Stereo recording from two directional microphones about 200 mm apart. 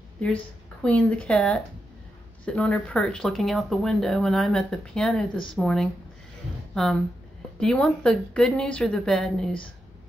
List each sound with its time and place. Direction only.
0.8 s speech: 5° left (ahead or behind)